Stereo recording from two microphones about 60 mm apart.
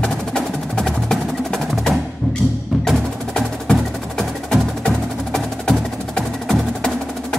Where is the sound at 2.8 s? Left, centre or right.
Centre.